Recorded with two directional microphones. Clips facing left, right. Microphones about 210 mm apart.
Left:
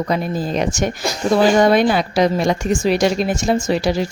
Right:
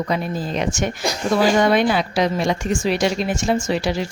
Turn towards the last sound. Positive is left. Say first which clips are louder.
# left 3 dB
turn(degrees=40)  # may be behind; listen again after turning